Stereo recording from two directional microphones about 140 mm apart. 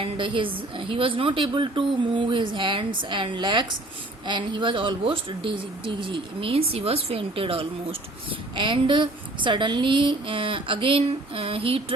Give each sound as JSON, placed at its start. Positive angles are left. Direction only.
{"t": 0.0, "sound": "speech", "side_deg": -35}